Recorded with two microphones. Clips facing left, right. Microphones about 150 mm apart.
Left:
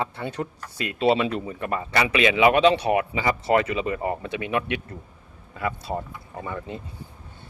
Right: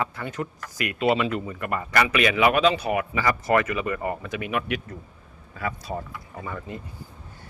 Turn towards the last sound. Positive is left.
turn(degrees=25)  # may be behind; listen again after turning